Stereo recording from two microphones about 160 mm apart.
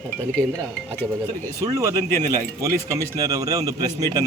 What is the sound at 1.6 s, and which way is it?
Speech, 20° right (ahead or behind).